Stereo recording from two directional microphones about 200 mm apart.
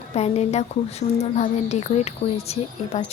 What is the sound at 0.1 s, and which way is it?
Speech, 35° left (ahead or behind).